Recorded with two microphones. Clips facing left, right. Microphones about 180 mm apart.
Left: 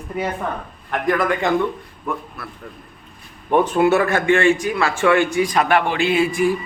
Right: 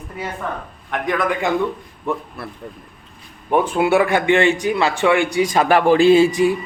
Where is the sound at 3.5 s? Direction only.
10° right (ahead or behind).